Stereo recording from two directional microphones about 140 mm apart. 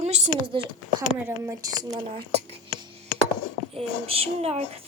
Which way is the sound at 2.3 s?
40° right (ahead or behind).